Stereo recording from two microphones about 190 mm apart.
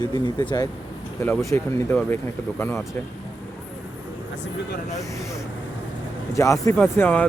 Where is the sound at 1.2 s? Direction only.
10° left (ahead or behind).